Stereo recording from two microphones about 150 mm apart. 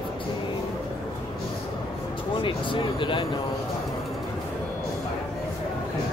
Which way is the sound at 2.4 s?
35° left (ahead or behind).